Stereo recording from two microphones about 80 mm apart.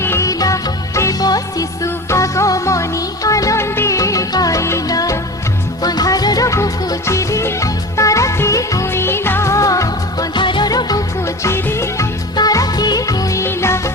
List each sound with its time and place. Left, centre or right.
0.0 s music: left
0.3 s music: left
8.9 s music: left
10.3 s music: left
10.7 s music: left
11.4 s music: left
12.4 s music: left
13.4 s music: left